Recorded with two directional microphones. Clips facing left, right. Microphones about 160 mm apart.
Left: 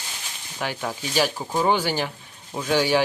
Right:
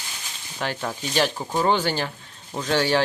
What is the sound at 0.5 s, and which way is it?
Speech, 10° left (ahead or behind).